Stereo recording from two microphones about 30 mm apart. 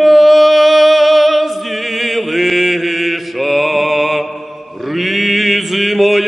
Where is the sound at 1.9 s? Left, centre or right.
Centre.